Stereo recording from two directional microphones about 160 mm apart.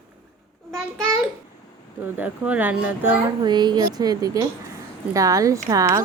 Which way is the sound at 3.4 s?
25° right (ahead or behind).